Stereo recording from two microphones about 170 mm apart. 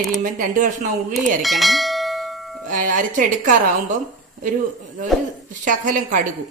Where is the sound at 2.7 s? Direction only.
50° right (ahead or behind).